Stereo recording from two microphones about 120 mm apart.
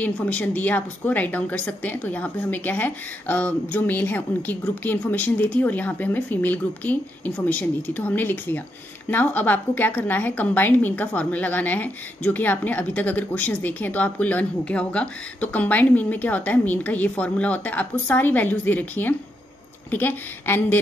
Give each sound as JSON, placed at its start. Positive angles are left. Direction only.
{"t": 0.0, "sound": "a woman's voice", "side_deg": 10}